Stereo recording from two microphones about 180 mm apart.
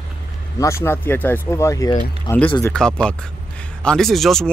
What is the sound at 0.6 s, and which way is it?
Speech, 15° left (ahead or behind).